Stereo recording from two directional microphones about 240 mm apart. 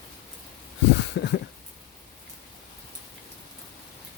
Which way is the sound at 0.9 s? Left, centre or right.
Left.